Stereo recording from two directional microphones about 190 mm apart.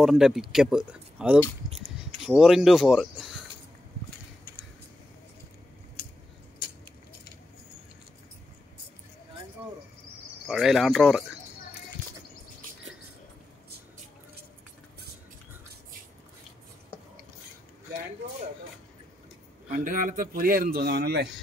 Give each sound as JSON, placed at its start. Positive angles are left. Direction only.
{"t": 0.0, "sound": "speech", "side_deg": 0}
{"t": 10.4, "sound": "speech", "side_deg": 0}
{"t": 19.7, "sound": "a man's voice", "side_deg": -45}